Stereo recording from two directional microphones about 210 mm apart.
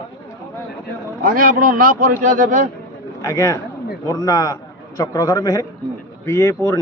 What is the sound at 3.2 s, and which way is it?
A man's voice, 15° left (ahead or behind).